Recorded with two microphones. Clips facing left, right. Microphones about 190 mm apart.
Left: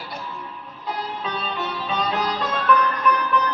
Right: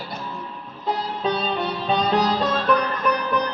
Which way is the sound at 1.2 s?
35° right (ahead or behind).